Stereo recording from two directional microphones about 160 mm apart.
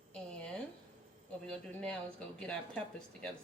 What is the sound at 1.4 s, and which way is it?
A woman's voice, 5° left (ahead or behind).